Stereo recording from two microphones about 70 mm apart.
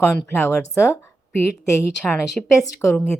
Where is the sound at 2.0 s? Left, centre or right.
Centre.